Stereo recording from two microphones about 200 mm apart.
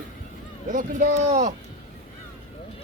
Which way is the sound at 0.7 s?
40° right (ahead or behind).